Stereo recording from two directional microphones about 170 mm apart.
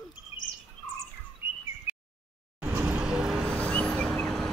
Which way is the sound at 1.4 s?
10° right (ahead or behind).